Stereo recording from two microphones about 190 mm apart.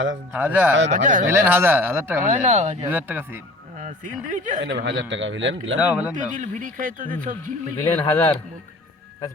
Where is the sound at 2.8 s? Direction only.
10° right (ahead or behind).